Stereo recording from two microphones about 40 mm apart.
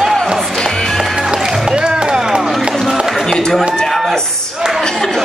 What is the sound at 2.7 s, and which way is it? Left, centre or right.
Run, centre.